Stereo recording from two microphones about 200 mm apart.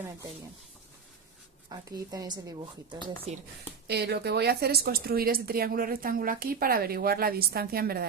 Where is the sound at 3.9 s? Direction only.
55° right (ahead or behind).